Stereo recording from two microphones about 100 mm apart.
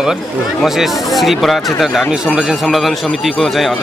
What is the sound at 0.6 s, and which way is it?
Speech, centre (ahead or behind).